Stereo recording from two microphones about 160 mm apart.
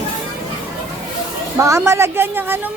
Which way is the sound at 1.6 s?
15° right (ahead or behind).